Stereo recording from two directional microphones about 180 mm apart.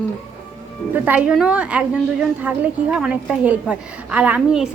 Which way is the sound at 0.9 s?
10° right (ahead or behind).